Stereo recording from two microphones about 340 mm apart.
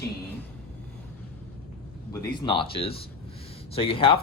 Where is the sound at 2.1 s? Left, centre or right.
Centre.